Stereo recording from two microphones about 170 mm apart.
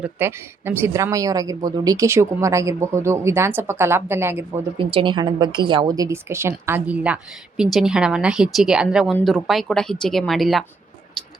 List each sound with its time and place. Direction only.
0.0 s speech: 15° right (ahead or behind)
4.8 s speech: 30° right (ahead or behind); by 10.6 s centre (ahead or behind)